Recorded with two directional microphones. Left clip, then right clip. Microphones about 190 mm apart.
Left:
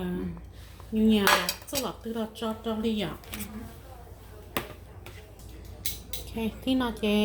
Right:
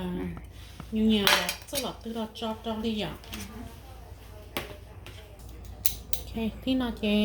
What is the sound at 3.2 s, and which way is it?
Speech, 50° left (ahead or behind).